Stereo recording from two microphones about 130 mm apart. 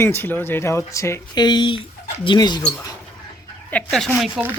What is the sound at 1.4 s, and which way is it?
Speech, 35° left (ahead or behind).